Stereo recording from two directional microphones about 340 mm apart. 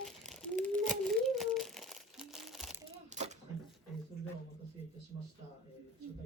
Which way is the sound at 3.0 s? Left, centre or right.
Right.